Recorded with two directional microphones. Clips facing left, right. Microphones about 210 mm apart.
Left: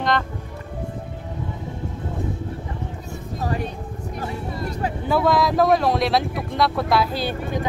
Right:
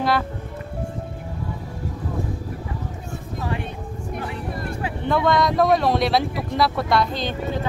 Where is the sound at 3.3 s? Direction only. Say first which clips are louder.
Left 2 dB; 40° left (ahead or behind).